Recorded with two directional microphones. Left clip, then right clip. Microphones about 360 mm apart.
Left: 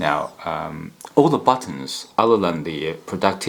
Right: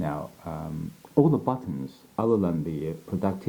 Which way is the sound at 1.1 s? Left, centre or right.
Centre.